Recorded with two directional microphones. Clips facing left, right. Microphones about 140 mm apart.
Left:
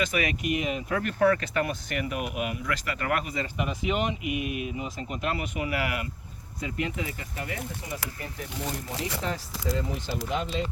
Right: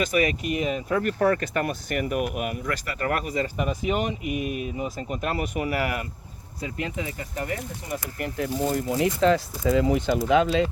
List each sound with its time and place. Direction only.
0.0 s speech: 40° right (ahead or behind)
8.2 s speech: 90° right